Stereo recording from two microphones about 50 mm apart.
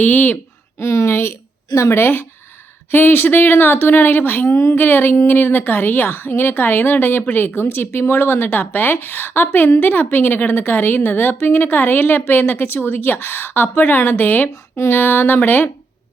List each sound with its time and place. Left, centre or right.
0.0 s speech: left
0.8 s speech: left
1.7 s a woman's voice: left
2.0 s a woman's voice: left
4.4 s a woman's voice: left
4.7 s a woman's voice: left